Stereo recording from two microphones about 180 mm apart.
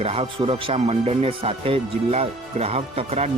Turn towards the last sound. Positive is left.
turn(degrees=-35)  # may be behind; listen again after turning